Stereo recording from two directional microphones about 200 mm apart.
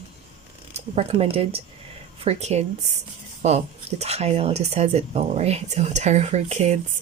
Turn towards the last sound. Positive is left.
turn(degrees=-35)  # may be behind; listen again after turning